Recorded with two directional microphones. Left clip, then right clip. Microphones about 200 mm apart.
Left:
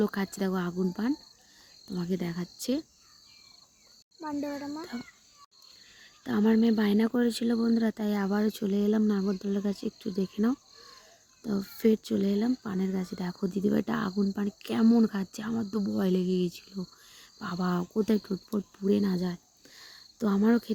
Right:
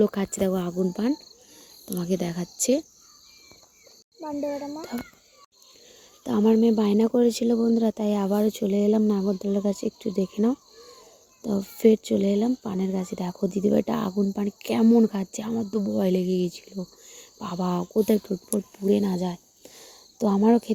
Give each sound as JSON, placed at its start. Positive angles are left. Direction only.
{"t": 0.0, "sound": "speech", "side_deg": 0}
{"t": 4.2, "sound": "speech", "side_deg": 5}
{"t": 6.2, "sound": "speech", "side_deg": 0}
{"t": 18.9, "sound": "cricket", "side_deg": 0}